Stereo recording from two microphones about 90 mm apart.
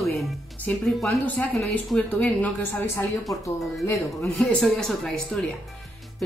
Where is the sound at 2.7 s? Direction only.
30° left (ahead or behind).